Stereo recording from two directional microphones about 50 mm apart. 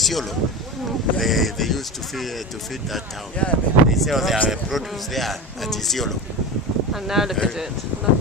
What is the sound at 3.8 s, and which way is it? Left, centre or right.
Speech, centre.